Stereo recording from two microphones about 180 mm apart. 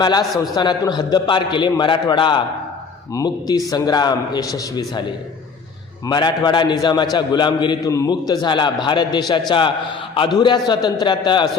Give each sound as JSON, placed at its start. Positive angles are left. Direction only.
{"t": 0.0, "sound": "a man's voice", "side_deg": 25}
{"t": 6.1, "sound": "a man's voice", "side_deg": 25}